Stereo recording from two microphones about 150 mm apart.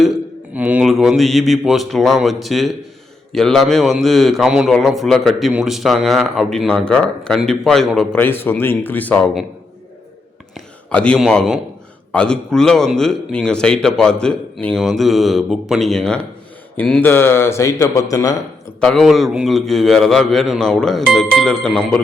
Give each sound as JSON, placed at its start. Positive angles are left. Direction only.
{"t": 0.5, "sound": "a man's voice", "side_deg": -10}
{"t": 8.2, "sound": "speech", "side_deg": 15}
{"t": 10.5, "sound": "a sound", "side_deg": 5}
{"t": 11.2, "sound": "a man's voice", "side_deg": 0}
{"t": 18.8, "sound": "a man's voice", "side_deg": 0}